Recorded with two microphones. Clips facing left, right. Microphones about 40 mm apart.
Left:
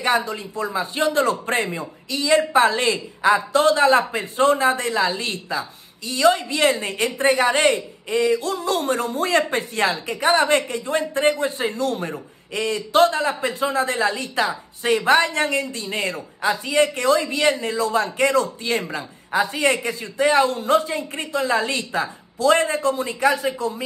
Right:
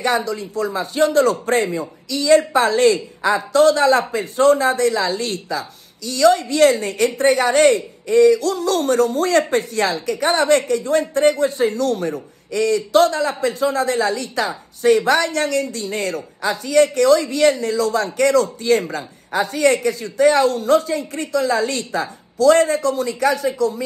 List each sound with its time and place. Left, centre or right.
0.0 s speech: left
2.0 s speech: left